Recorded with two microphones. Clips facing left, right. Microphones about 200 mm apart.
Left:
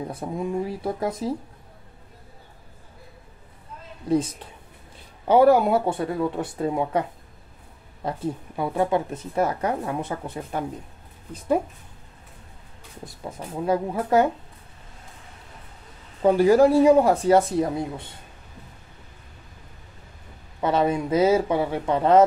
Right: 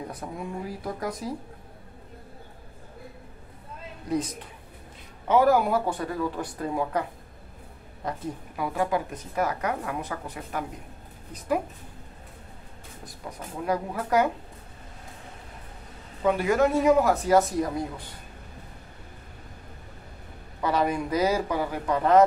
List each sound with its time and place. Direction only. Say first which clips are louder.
0.1 s a woman's voice: left 7 dB; 25° left (ahead or behind)
4.1 s a woman's voice: left 5 dB; 25° left (ahead or behind)
13.0 s a woman's voice: left 4 dB; 25° left (ahead or behind)
16.2 s speech: left 6 dB; 35° left (ahead or behind)
20.6 s a woman's voice: left 3 dB; 25° left (ahead or behind)